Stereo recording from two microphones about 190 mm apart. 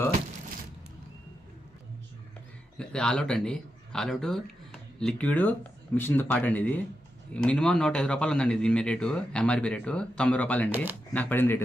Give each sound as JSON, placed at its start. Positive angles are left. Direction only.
{"t": 2.7, "sound": "a man's voice", "side_deg": 5}